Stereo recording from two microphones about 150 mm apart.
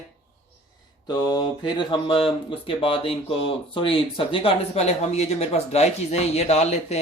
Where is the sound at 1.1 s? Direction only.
25° left (ahead or behind).